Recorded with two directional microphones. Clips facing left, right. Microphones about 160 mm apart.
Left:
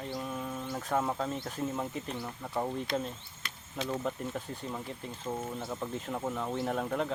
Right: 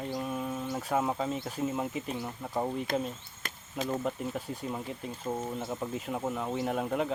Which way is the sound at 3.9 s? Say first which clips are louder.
Right 1 dB; 10° right (ahead or behind).